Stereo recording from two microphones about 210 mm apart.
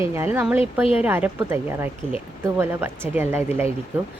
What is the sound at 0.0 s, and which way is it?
Speech, 10° right (ahead or behind).